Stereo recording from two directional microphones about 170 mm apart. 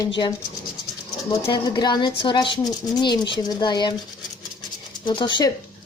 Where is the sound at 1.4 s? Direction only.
30° left (ahead or behind).